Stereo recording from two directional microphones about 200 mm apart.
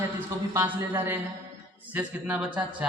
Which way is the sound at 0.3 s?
15° right (ahead or behind).